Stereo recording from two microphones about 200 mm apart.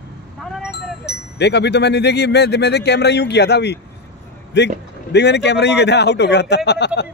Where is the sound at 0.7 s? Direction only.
55° left (ahead or behind).